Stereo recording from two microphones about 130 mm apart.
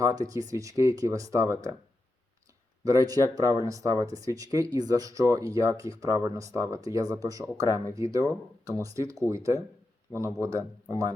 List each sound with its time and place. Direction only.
0.0 s speech: 25° right (ahead or behind)
2.8 s speech: 25° right (ahead or behind)